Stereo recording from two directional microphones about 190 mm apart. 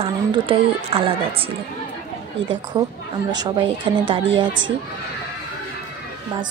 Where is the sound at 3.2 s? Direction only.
25° right (ahead or behind).